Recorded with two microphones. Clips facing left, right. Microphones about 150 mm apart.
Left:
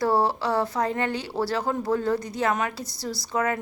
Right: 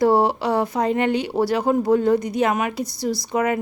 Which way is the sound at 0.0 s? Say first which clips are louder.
Right 5 dB; 20° right (ahead or behind).